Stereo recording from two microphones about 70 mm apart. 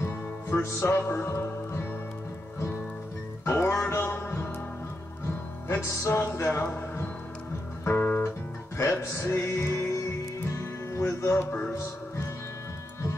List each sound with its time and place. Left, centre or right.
0.0 s music: left
3.4 s music: left
5.7 s music: left
6.6 s a man's voice: left
7.8 s music: left
8.7 s music: left